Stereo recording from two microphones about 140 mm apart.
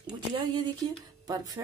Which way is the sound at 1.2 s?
25° right (ahead or behind).